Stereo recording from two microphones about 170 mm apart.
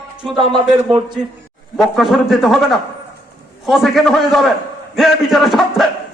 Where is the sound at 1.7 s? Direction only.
Centre (ahead or behind).